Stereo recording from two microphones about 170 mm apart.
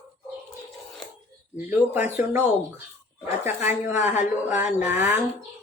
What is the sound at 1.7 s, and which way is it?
A woman's voice, 10° right (ahead or behind).